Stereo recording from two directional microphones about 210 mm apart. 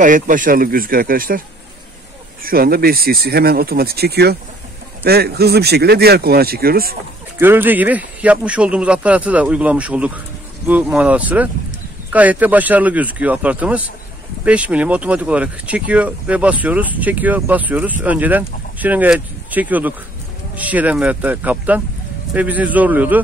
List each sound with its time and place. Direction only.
0.0 s speech: 40° right (ahead or behind)
2.4 s speech: 45° right (ahead or behind)
7.3 s speech: 10° right (ahead or behind)